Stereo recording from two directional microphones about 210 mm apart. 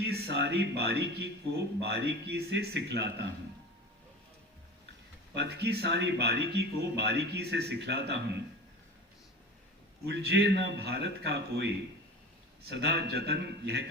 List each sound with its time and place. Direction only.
0.0 s speech: 50° right (ahead or behind)
5.3 s speech: 50° right (ahead or behind)
10.1 s speech: 55° right (ahead or behind)